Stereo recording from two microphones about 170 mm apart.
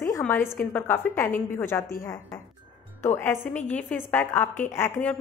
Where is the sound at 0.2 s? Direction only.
10° left (ahead or behind).